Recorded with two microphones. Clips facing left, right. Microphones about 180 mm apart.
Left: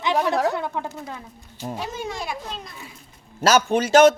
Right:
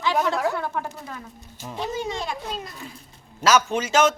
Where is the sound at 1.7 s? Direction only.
10° left (ahead or behind).